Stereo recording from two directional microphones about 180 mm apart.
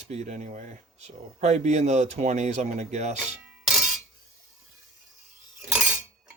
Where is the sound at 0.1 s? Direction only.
40° right (ahead or behind).